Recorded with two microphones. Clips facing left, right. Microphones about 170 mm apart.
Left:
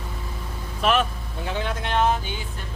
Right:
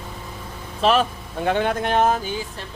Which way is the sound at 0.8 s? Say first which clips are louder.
Right 3 dB; 35° right (ahead or behind).